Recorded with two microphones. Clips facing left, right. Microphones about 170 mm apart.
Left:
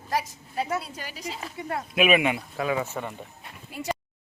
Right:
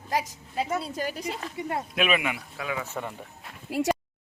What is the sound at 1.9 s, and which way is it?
Speech, 10° left (ahead or behind).